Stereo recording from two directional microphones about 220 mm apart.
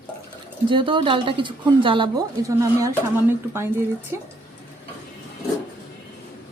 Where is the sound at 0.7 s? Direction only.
20° right (ahead or behind).